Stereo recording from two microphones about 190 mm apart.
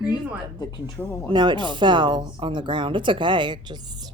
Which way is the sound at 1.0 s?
10° left (ahead or behind).